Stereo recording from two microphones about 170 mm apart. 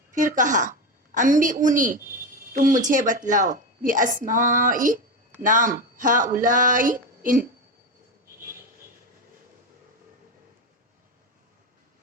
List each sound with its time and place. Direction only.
0.1 s a woman's voice: 50° right (ahead or behind)